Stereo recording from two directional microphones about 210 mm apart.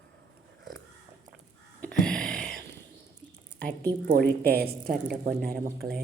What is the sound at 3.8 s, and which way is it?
Speech, 45° right (ahead or behind).